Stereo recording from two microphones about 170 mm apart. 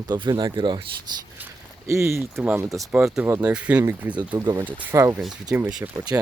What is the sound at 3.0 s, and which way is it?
Speech, 5° right (ahead or behind).